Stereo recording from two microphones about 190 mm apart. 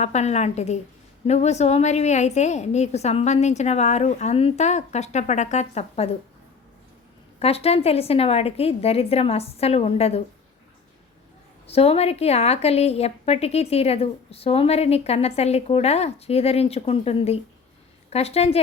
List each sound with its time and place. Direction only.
0.0 s a woman's voice: 35° left (ahead or behind)
7.3 s a woman's voice: 30° left (ahead or behind)
11.6 s a woman's voice: 30° left (ahead or behind)